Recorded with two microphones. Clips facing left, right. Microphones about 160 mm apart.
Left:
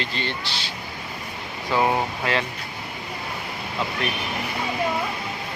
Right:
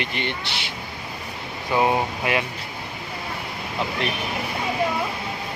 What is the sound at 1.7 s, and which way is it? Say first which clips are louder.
Speech: right 1 dB; 15° right (ahead or behind).